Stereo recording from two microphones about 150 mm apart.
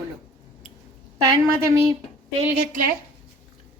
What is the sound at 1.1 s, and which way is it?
Speech, 25° right (ahead or behind).